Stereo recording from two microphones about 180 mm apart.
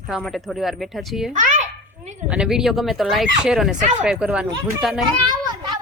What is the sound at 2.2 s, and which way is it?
Speech, 5° right (ahead or behind).